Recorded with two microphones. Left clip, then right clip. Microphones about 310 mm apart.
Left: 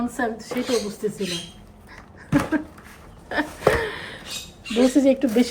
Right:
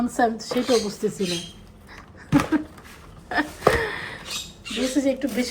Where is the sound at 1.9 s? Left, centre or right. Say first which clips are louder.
Right 1 dB; centre.